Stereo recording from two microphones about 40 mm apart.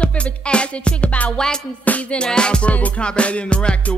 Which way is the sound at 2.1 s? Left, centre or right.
Left.